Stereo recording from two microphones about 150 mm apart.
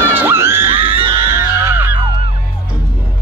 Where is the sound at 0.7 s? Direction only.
35° right (ahead or behind).